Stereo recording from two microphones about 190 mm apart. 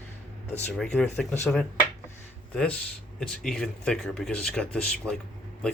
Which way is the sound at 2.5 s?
5° left (ahead or behind).